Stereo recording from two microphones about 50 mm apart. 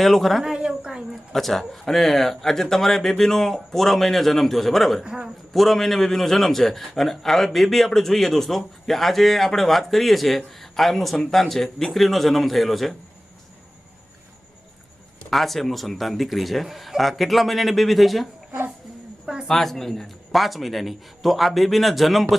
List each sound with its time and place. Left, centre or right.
0.0 s a man's voice: centre
0.4 s a sound: centre
1.3 s a man's voice: centre
5.0 s a man's voice: centre
5.5 s a man's voice: centre
15.3 s a man's voice: centre
19.2 s a sound: centre
19.5 s a man's voice: centre